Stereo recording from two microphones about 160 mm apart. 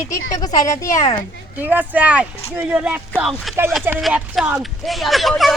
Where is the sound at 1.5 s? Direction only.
10° right (ahead or behind).